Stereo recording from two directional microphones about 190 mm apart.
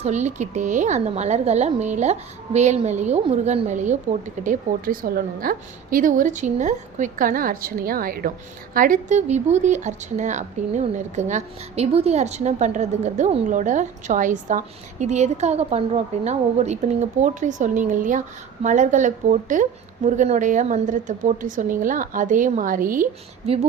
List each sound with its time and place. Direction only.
0.0 s a woman's voice: 35° right (ahead or behind)